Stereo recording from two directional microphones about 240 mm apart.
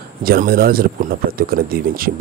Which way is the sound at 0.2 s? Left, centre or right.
Right.